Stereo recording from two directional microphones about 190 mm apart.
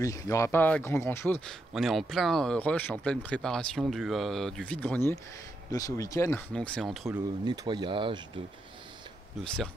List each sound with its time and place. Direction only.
0.0 s speech: 15° left (ahead or behind)
6.5 s speech: 5° left (ahead or behind)
7.1 s speech: 20° right (ahead or behind)